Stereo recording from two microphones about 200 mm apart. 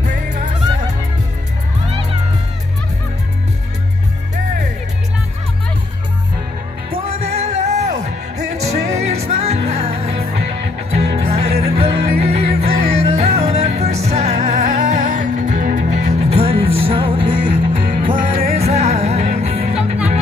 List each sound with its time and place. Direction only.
7.1 s music: 35° right (ahead or behind)
18.1 s music: 45° right (ahead or behind)
18.5 s music: 30° right (ahead or behind)